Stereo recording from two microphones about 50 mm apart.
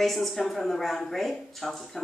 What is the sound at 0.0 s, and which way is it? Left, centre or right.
A woman's voice, centre.